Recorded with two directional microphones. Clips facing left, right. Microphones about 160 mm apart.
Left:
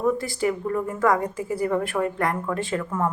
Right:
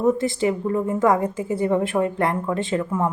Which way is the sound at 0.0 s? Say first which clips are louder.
Right 3 dB; 25° right (ahead or behind).